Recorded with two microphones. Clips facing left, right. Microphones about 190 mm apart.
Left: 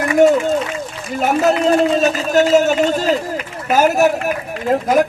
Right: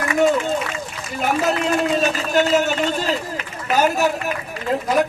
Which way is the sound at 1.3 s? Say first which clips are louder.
Left 6 dB; 40° left (ahead or behind).